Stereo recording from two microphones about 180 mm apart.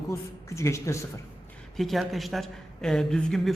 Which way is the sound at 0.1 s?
15° left (ahead or behind).